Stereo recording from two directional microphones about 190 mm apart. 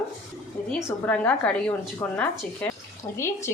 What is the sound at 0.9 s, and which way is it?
Speech, 10° left (ahead or behind).